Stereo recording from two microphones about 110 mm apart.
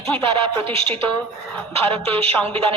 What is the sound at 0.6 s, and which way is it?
Speech, 55° right (ahead or behind).